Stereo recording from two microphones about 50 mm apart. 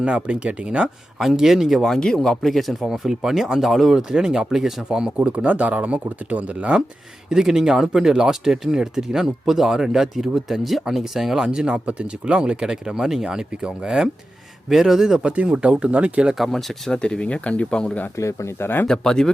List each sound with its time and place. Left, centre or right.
0.0 s speech: right
1.4 s speech: centre
2.0 s speech: centre; by 6.7 s right
7.3 s speech: centre
11.4 s speech: centre
13.2 s speech: centre
15.3 s speech: right
16.4 s speech: centre
17.0 s speech: centre
18.2 s speech: left
18.6 s speech: left
18.9 s speech: centre